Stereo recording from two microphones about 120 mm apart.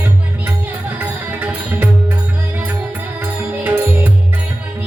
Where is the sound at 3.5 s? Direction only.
15° right (ahead or behind).